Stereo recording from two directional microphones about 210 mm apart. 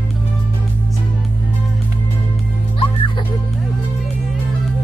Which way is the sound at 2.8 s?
25° left (ahead or behind).